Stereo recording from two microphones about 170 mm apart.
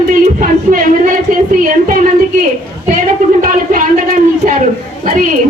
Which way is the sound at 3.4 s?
55° right (ahead or behind).